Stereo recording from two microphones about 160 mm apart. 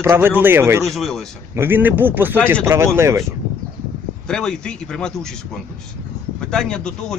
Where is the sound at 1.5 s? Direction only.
15° right (ahead or behind).